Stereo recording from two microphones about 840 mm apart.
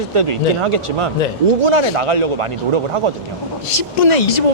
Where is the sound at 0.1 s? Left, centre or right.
Right.